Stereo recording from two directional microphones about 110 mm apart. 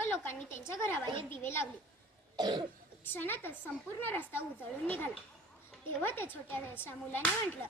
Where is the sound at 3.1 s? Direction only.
20° left (ahead or behind).